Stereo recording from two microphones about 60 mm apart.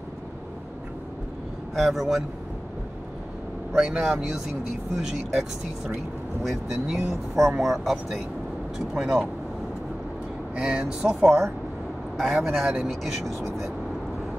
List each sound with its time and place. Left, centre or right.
1.8 s speech: centre
3.7 s speech: centre
10.5 s speech: centre
11.2 s speech: centre